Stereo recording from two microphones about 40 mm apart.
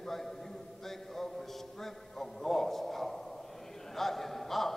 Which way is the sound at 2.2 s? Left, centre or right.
Centre.